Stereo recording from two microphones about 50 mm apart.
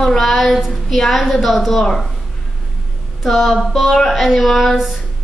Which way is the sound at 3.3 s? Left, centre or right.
Centre.